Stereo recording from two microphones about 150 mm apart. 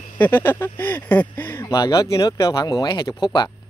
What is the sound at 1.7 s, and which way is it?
Speech, 25° left (ahead or behind).